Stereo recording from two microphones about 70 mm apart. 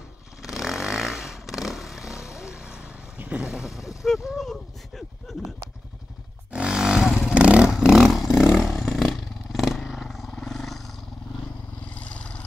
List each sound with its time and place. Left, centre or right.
0.4 s vehicle: centre
4.0 s a sound: centre
6.5 s wild animals: centre
7.2 s vehicle: centre
8.5 s roar: centre
11.9 s vehicle: centre